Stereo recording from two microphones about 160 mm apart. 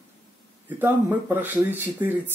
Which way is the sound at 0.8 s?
10° right (ahead or behind).